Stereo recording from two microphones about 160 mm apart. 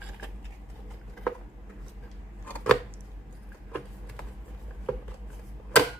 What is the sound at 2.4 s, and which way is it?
Chopping, 5° left (ahead or behind).